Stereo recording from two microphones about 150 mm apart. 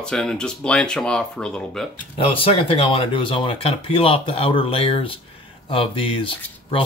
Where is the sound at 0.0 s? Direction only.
5° left (ahead or behind).